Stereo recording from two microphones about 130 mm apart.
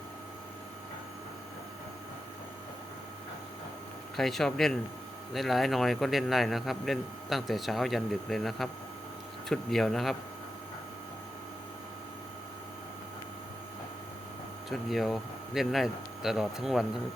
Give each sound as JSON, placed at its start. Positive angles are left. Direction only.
{"t": 4.2, "sound": "speech", "side_deg": 0}
{"t": 14.7, "sound": "speech", "side_deg": 0}